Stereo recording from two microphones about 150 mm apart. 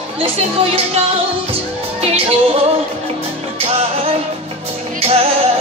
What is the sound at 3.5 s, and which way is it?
Music, 40° right (ahead or behind).